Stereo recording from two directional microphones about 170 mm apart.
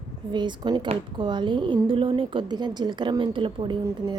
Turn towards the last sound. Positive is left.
turn(degrees=-20)  # may be behind; listen again after turning